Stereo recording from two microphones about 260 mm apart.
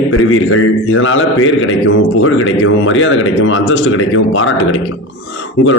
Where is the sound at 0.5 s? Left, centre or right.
Left.